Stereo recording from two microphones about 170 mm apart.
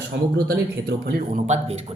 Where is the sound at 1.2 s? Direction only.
45° right (ahead or behind).